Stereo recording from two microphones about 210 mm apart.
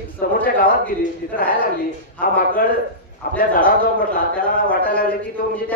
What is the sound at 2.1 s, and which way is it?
A man's voice, 40° left (ahead or behind).